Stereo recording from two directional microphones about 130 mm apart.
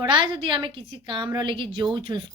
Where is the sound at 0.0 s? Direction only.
40° right (ahead or behind).